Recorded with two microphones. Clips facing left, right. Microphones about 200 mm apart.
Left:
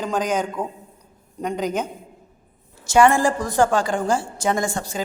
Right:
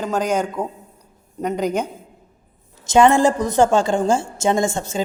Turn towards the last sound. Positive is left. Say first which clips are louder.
# right 4 dB
turn(degrees=-25)  # may be behind; listen again after turning